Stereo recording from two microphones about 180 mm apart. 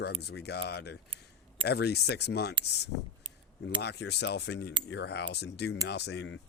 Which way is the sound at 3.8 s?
70° left (ahead or behind).